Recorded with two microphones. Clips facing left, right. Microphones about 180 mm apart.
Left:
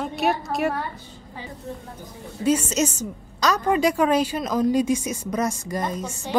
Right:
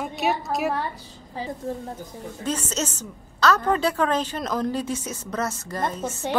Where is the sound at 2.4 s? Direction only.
10° left (ahead or behind).